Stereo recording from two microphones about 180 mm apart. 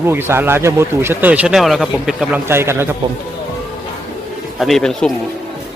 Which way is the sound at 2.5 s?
15° right (ahead or behind).